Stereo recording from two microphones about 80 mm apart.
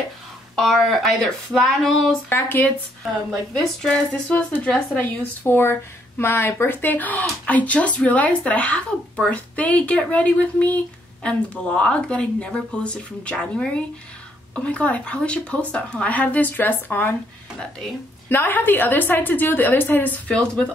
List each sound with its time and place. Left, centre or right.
0.6 s speech: centre
2.2 s speech: left
3.3 s speech: centre
4.7 s speech: left
18.3 s speech: left